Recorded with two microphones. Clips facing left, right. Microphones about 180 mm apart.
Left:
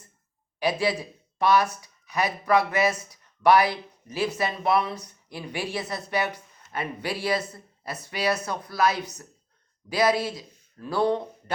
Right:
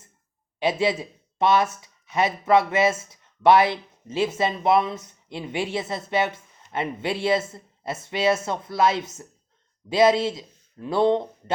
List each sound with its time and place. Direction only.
0.6 s speech: 25° right (ahead or behind)